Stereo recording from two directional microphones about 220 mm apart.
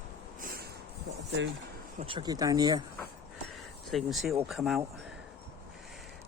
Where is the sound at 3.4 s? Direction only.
Centre (ahead or behind).